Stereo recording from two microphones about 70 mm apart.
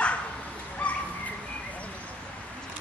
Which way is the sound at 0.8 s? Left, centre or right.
Centre.